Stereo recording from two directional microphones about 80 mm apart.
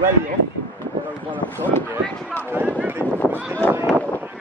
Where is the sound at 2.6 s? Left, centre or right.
Right.